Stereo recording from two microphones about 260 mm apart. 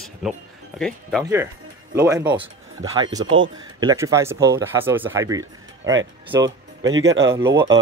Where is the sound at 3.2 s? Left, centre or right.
Right.